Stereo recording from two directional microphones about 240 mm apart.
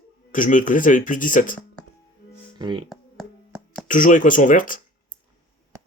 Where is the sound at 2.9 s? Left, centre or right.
Centre.